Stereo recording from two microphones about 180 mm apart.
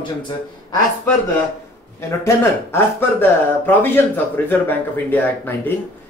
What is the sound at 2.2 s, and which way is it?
A man's voice, 15° left (ahead or behind).